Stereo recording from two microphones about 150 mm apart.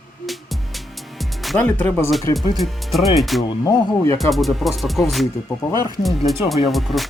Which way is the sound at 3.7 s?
20° left (ahead or behind).